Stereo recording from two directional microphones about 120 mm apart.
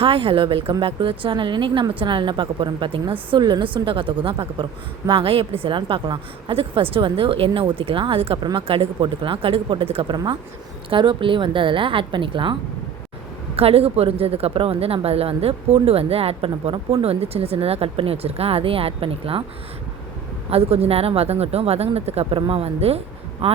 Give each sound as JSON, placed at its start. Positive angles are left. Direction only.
{"t": 0.0, "sound": "speech", "side_deg": -50}
{"t": 13.6, "sound": "speech", "side_deg": -55}
{"t": 20.5, "sound": "speech", "side_deg": -55}